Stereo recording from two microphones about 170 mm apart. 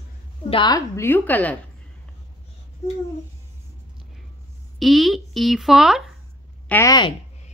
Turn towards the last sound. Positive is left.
turn(degrees=10)  # may be behind; listen again after turning